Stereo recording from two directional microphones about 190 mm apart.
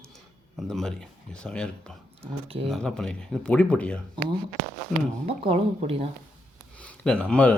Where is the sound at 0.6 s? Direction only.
5° left (ahead or behind).